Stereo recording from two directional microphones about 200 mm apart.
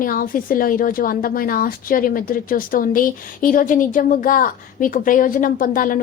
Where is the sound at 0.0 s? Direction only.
45° left (ahead or behind).